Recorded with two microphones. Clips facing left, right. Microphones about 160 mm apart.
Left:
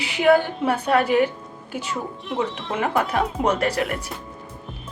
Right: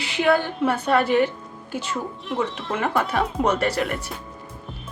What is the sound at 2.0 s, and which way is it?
Speech, centre (ahead or behind).